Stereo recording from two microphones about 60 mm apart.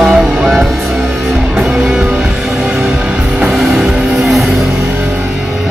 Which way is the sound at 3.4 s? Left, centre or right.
Centre.